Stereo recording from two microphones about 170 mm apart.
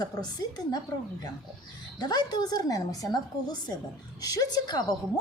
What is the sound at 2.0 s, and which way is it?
A woman's voice, 25° left (ahead or behind).